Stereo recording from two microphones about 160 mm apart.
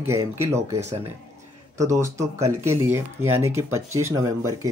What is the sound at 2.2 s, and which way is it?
Speech, 15° right (ahead or behind).